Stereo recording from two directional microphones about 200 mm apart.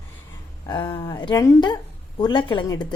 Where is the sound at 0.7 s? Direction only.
20° left (ahead or behind).